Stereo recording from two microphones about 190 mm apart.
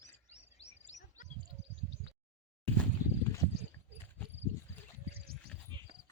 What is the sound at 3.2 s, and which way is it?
Horse, 15° left (ahead or behind).